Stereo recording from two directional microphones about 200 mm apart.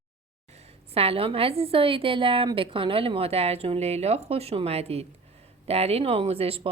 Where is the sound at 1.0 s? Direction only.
30° right (ahead or behind).